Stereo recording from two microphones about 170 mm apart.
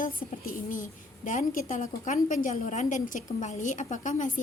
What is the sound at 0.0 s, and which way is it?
A woman's voice, 55° left (ahead or behind).